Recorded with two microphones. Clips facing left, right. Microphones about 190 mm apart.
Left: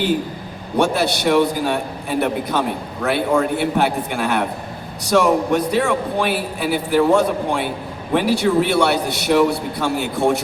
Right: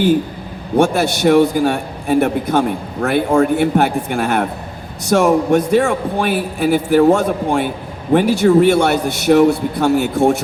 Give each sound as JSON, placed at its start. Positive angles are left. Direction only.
{"t": 0.8, "sound": "a man's voice", "side_deg": -50}